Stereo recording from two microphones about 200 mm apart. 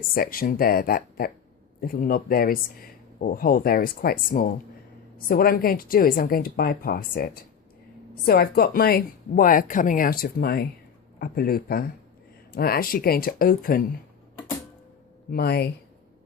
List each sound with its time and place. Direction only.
0.1 s speech: 45° left (ahead or behind)
15.3 s speech: 50° left (ahead or behind)